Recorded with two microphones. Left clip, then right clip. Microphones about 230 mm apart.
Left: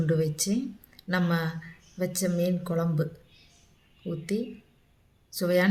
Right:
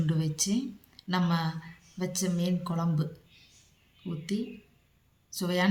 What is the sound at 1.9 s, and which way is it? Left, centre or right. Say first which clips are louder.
Speech: left 5 dB; centre.